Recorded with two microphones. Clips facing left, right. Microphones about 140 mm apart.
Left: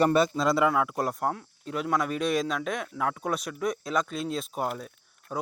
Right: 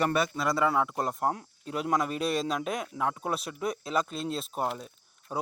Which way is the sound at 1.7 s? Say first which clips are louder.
Left 1 dB; 35° right (ahead or behind).